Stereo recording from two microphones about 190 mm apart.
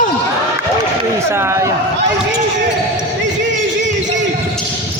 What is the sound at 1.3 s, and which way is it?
Speech, 15° right (ahead or behind).